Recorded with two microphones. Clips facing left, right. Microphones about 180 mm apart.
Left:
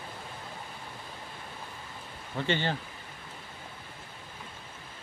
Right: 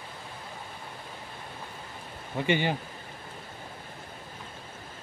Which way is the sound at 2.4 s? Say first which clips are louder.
Right 3 dB; 15° right (ahead or behind).